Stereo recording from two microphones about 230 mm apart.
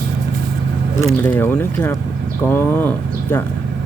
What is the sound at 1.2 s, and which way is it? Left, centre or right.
Speech, centre.